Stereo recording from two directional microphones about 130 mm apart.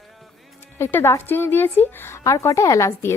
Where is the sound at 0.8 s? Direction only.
15° left (ahead or behind).